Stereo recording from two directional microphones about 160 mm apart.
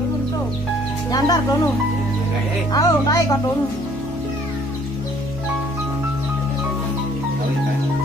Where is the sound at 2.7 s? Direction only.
25° left (ahead or behind).